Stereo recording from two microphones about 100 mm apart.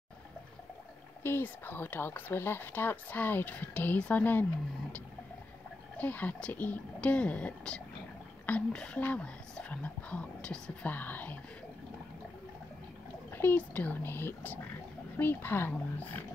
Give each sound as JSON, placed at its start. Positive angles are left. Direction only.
{"t": 1.2, "sound": "speech", "side_deg": 20}
{"t": 5.9, "sound": "speech", "side_deg": 15}
{"t": 13.3, "sound": "speech", "side_deg": 20}